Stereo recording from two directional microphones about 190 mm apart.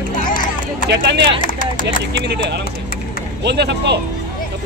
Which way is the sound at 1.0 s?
60° right (ahead or behind).